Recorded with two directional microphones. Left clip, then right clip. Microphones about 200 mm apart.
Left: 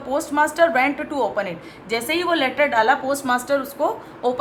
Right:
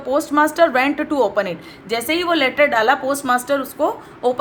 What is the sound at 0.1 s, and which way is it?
A woman's voice, 25° right (ahead or behind).